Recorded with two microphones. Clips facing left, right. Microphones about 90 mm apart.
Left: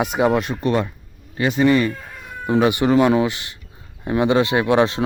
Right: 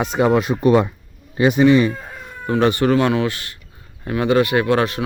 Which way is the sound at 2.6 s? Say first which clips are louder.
Even; 15° left (ahead or behind).